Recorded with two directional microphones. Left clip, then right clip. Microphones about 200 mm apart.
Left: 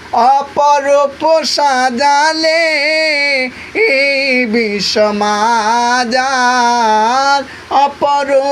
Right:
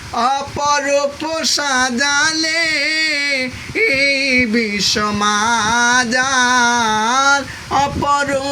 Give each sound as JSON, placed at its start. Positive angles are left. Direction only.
{"t": 0.2, "sound": "speech", "side_deg": -20}